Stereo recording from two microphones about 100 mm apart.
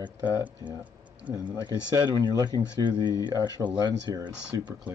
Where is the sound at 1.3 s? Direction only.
45° right (ahead or behind).